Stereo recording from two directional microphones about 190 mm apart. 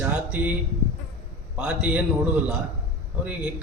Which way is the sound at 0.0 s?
5° right (ahead or behind).